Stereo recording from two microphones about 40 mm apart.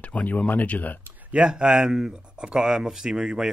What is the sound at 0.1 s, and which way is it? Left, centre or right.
Speech, left.